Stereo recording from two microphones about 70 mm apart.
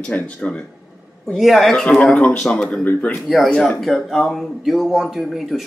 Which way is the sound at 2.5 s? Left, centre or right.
Centre.